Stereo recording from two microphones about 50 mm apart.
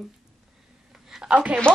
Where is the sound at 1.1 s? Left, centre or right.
Centre.